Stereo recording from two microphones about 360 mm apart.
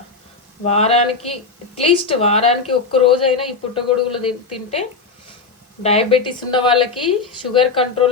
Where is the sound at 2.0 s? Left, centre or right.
Centre.